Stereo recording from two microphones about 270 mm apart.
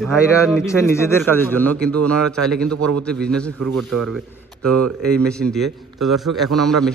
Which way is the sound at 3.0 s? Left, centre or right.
Centre.